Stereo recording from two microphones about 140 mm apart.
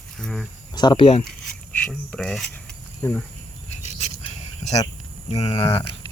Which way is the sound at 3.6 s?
50° left (ahead or behind).